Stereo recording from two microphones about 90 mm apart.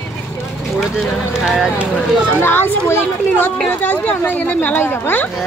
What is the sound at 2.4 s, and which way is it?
Speech, 25° left (ahead or behind).